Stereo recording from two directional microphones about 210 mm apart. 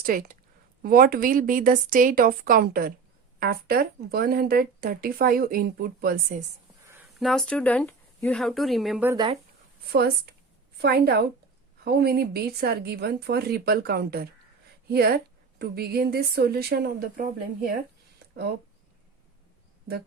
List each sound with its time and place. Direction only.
0.0 s speech: 40° right (ahead or behind)
7.2 s speech: centre (ahead or behind)
9.1 s speech: 20° right (ahead or behind)
9.9 s speech: 50° right (ahead or behind)